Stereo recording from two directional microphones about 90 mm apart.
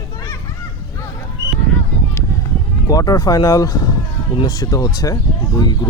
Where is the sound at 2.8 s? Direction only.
45° left (ahead or behind).